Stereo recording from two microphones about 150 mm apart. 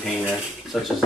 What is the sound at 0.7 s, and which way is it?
Speech, centre (ahead or behind).